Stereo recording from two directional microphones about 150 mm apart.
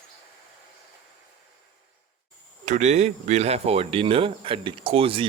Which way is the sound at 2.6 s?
55° right (ahead or behind).